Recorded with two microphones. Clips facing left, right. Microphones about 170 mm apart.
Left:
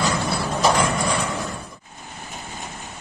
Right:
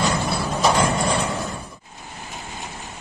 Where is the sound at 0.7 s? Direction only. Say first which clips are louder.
Right 1 dB; 30° right (ahead or behind).